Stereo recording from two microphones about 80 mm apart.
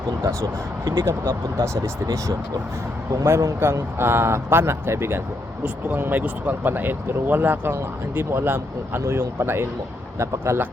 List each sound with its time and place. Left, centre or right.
1.0 s speech: right
3.1 s speech: right
5.6 s speech: right